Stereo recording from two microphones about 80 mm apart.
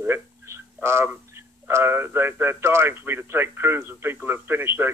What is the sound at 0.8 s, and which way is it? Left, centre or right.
Speech, right.